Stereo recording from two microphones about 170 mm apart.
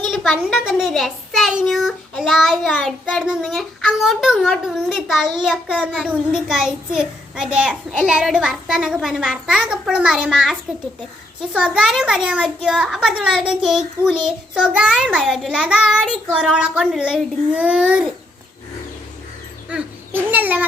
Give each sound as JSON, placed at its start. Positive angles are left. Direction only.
{"t": 0.1, "sound": "a child's voice", "side_deg": 0}
{"t": 19.7, "sound": "a child's voice", "side_deg": -10}